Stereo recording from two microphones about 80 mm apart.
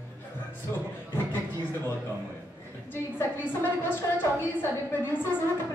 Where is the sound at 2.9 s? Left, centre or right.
Left.